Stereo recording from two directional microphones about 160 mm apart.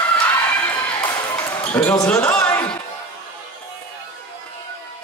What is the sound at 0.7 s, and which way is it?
Basketball bounce, 25° left (ahead or behind).